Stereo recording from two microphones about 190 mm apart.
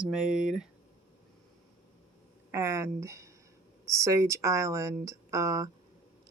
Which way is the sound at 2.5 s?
15° right (ahead or behind).